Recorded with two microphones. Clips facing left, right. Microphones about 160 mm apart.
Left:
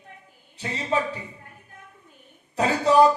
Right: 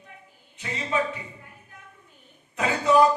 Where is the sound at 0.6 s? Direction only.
35° left (ahead or behind).